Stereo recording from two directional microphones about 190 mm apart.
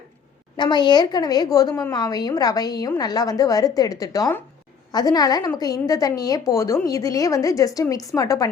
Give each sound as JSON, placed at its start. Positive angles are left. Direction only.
{"t": 0.5, "sound": "a woman's voice", "side_deg": 25}